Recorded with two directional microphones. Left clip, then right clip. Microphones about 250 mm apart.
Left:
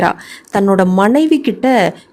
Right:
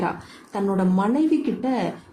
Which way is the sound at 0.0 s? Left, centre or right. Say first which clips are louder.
Left 12 dB; left.